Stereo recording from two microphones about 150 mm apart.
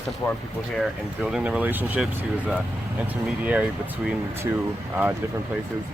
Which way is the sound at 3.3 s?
10° right (ahead or behind).